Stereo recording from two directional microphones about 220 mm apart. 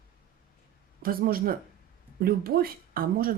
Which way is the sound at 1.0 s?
40° right (ahead or behind).